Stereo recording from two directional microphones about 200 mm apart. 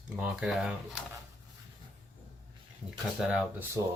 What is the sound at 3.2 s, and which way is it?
Speech, 5° right (ahead or behind).